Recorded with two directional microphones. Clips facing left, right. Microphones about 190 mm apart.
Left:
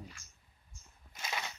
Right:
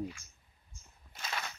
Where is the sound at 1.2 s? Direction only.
10° left (ahead or behind).